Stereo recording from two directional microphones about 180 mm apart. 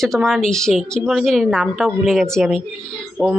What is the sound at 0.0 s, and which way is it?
A woman's voice, centre (ahead or behind).